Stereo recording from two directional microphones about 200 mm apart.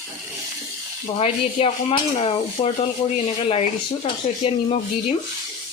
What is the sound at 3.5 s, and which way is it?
Dishes, 30° left (ahead or behind).